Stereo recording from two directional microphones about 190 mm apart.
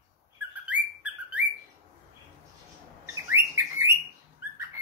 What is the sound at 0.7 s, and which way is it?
Bird, 5° right (ahead or behind).